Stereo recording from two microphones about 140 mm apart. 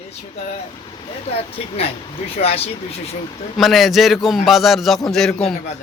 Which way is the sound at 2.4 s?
45° left (ahead or behind).